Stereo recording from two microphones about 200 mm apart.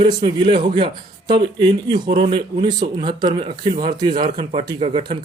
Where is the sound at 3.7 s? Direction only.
40° right (ahead or behind).